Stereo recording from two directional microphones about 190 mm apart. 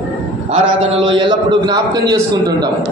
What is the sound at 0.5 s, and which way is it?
A man's voice, 25° right (ahead or behind).